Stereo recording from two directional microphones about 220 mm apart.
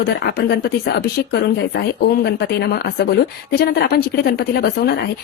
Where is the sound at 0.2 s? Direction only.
50° left (ahead or behind).